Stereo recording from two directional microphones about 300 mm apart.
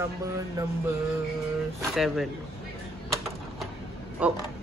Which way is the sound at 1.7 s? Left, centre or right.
Centre.